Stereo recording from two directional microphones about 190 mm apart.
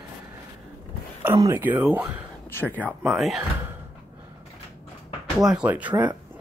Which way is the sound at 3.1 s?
Centre (ahead or behind).